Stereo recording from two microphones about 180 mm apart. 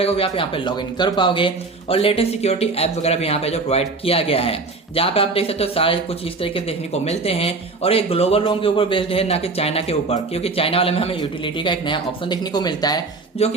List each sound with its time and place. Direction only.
0.0 s speech: 30° left (ahead or behind)
13.4 s speech: 35° left (ahead or behind)